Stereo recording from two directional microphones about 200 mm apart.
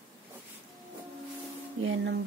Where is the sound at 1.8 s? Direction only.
70° right (ahead or behind).